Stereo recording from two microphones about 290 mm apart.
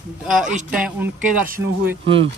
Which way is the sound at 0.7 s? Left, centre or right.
Centre.